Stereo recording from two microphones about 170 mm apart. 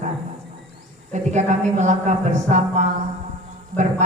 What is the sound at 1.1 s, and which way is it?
A woman's voice, 45° right (ahead or behind).